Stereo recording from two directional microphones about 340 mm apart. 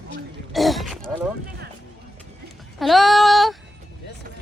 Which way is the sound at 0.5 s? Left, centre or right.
Centre.